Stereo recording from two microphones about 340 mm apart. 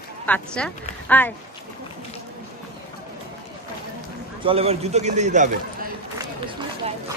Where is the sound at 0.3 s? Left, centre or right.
Centre.